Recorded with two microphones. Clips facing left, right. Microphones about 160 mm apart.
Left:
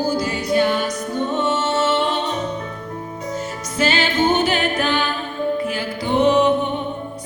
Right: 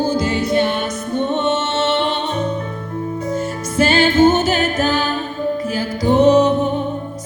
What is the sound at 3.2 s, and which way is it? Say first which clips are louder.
Music: right 5 dB; 55° right (ahead or behind).